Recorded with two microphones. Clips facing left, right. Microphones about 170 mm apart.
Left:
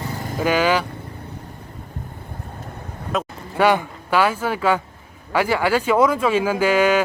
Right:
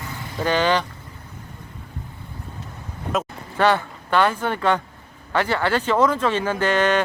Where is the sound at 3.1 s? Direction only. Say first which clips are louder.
Even; centre (ahead or behind).